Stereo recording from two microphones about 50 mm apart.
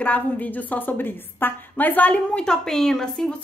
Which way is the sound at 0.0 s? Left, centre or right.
Left.